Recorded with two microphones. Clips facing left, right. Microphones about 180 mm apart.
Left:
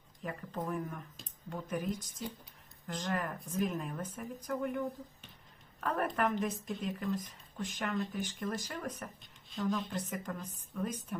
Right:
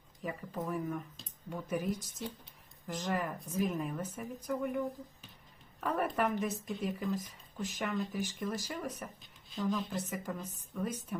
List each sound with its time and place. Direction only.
0.2 s a woman's voice: centre (ahead or behind)